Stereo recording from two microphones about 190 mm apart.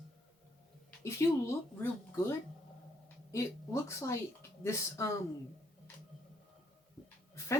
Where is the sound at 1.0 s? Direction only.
15° left (ahead or behind).